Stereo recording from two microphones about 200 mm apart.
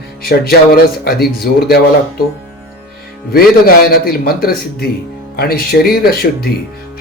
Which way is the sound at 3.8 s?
50° left (ahead or behind).